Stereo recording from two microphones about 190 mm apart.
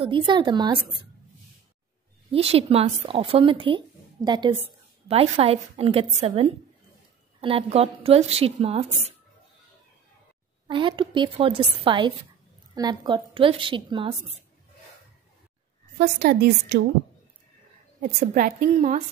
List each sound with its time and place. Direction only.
0.0 s speech: 25° right (ahead or behind)
2.3 s speech: 30° right (ahead or behind)
5.0 s a woman's voice: 30° right (ahead or behind)
10.7 s speech: 25° right (ahead or behind)
16.0 s a woman's voice: 55° right (ahead or behind)
18.0 s a woman's voice: 45° right (ahead or behind)